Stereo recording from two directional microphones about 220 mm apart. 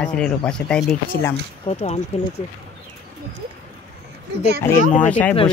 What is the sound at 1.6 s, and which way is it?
Speech, 30° left (ahead or behind).